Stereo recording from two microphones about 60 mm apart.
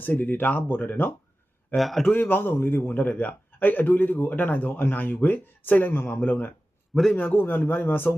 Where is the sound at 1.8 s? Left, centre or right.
Centre.